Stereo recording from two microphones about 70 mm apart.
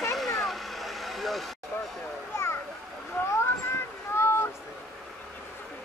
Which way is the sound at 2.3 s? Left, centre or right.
Left.